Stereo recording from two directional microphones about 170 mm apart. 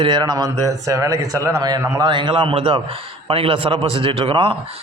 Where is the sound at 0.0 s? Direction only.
25° right (ahead or behind).